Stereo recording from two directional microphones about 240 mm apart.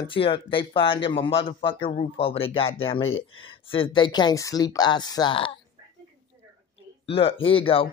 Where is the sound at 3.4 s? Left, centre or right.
Left.